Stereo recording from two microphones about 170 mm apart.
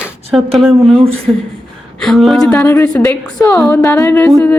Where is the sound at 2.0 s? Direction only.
Centre (ahead or behind).